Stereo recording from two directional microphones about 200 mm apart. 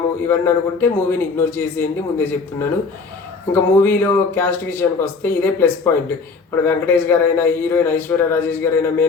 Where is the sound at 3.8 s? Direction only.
10° left (ahead or behind).